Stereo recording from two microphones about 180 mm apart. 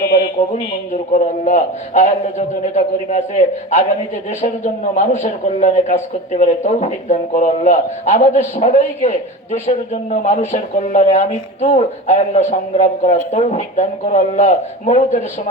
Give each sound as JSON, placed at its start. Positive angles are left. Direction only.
{"t": 0.4, "sound": "a man's voice", "side_deg": 40}